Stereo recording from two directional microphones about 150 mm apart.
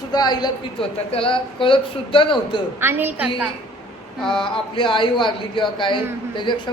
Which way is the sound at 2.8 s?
15° right (ahead or behind).